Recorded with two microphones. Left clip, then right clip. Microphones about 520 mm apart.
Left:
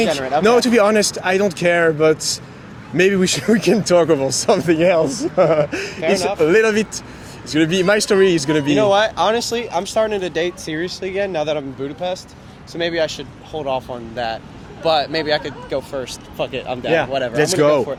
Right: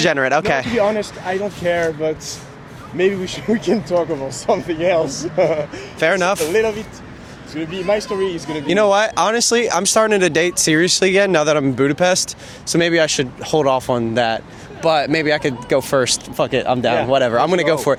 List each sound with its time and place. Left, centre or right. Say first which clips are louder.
0.1 s speech: right 3 dB; right
0.8 s speech: left 3 dB; left
5.5 s speech: left 6 dB; left
6.0 s speech: right 3 dB; right
6.5 s speech: left 3 dB; left
8.7 s speech: right 2 dB; right
16.4 s speech: right 5 dB; right